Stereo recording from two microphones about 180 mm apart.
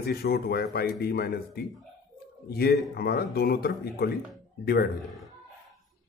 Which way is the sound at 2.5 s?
60° left (ahead or behind).